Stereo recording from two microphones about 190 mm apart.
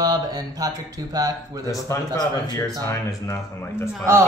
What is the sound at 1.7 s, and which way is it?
Speech, 15° left (ahead or behind).